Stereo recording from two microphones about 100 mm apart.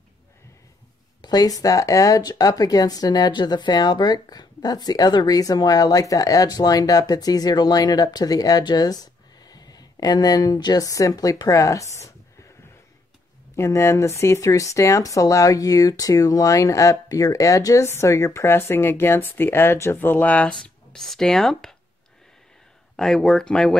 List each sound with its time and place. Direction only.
1.2 s speech: 40° left (ahead or behind)
13.6 s speech: 30° left (ahead or behind)
20.5 s speech: 5° left (ahead or behind)
22.9 s speech: 5° left (ahead or behind)